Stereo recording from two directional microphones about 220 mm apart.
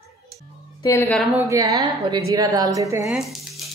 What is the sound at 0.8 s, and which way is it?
Speech, 10° left (ahead or behind).